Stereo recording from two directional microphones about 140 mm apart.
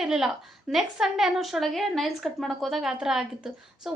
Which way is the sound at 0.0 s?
5° right (ahead or behind).